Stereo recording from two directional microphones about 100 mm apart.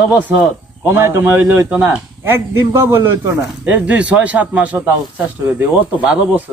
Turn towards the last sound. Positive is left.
turn(degrees=-15)  # may be behind; listen again after turning